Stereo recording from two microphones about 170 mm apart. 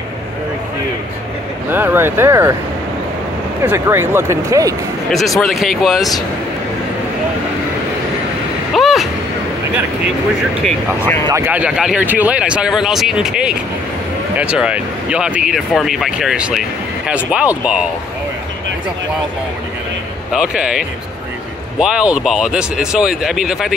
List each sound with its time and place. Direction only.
1.7 s speech: 10° right (ahead or behind)
3.6 s speech: 15° right (ahead or behind)
5.1 s speech: centre (ahead or behind)
8.7 s a sound: centre (ahead or behind)
11.2 s speech: 15° right (ahead or behind)
20.3 s speech: 5° right (ahead or behind)